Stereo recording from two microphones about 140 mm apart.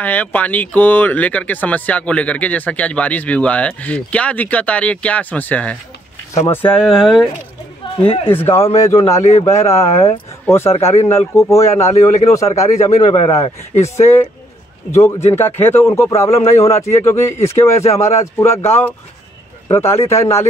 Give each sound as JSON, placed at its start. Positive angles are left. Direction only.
{"t": 0.0, "sound": "speech", "side_deg": 10}
{"t": 6.8, "sound": "speech", "side_deg": 0}
{"t": 8.0, "sound": "speech", "side_deg": 40}
{"t": 8.3, "sound": "speech", "side_deg": 15}
{"t": 13.0, "sound": "speech", "side_deg": 35}
{"t": 13.3, "sound": "speech", "side_deg": 20}